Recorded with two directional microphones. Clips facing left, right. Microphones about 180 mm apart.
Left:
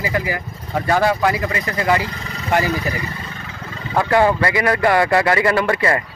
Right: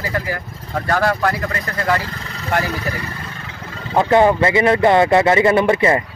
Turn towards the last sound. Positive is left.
turn(degrees=-20)  # may be behind; listen again after turning